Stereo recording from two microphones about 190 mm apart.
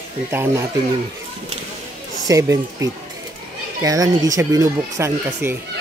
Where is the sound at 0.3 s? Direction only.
10° right (ahead or behind).